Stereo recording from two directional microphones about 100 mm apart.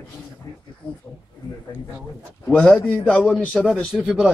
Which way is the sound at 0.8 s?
55° left (ahead or behind).